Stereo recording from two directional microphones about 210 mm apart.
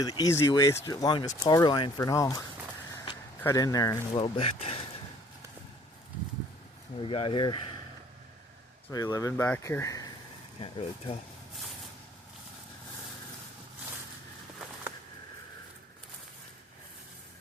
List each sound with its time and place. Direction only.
0.0 s speech: 20° left (ahead or behind)
7.0 s speech: 25° left (ahead or behind)
8.9 s speech: 15° left (ahead or behind)
10.6 s speech: 25° left (ahead or behind)